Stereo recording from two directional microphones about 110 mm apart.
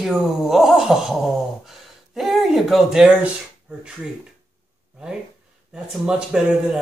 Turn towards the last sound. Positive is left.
turn(degrees=-5)  # may be behind; listen again after turning